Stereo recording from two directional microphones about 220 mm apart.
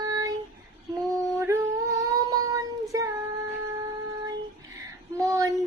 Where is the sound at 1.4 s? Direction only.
15° right (ahead or behind).